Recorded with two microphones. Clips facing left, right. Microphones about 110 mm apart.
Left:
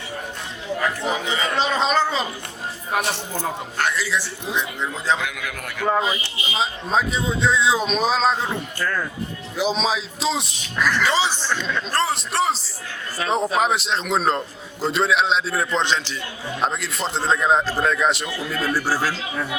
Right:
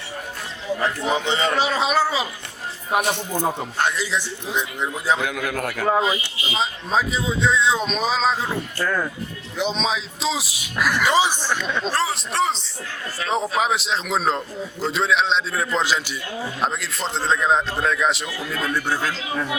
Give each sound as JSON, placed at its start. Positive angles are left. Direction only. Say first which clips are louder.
{"t": 1.1, "sound": "speech", "louder": "right 3 dB", "side_deg": -25}
{"t": 1.5, "sound": "a man's voice", "louder": "left 3 dB", "side_deg": -10}
{"t": 2.9, "sound": "a man's voice", "louder": "right 3 dB", "side_deg": -20}
{"t": 5.2, "sound": "a man's voice", "louder": "right 5 dB", "side_deg": -30}
{"t": 6.0, "sound": "a man's voice", "louder": "right 2 dB", "side_deg": 0}
{"t": 8.8, "sound": "a man's voice", "louder": "right 2 dB", "side_deg": -15}
{"t": 9.6, "sound": "a man's voice", "louder": "left 2 dB", "side_deg": 0}
{"t": 11.9, "sound": "a man's voice", "louder": "left 2 dB", "side_deg": 0}